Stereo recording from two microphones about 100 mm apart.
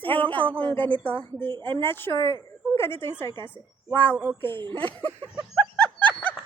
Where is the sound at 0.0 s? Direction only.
15° left (ahead or behind).